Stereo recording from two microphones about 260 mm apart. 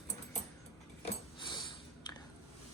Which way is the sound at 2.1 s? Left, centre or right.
Centre.